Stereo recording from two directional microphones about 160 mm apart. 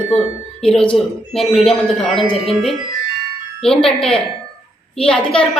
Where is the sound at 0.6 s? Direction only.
5° left (ahead or behind).